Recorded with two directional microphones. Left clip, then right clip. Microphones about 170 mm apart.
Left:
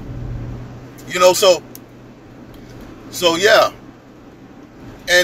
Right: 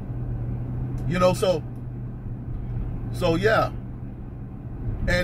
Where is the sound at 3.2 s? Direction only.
10° left (ahead or behind).